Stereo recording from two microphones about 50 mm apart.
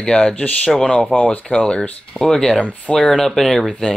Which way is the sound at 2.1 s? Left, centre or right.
Centre.